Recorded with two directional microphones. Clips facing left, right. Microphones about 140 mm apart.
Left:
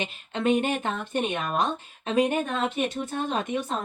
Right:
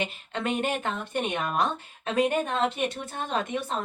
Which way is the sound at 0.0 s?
20° left (ahead or behind).